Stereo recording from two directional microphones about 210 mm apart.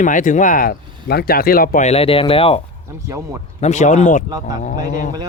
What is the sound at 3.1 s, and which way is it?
Speech, 15° right (ahead or behind).